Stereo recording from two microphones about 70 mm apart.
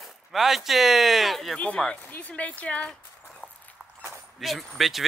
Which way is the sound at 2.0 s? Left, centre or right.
Left.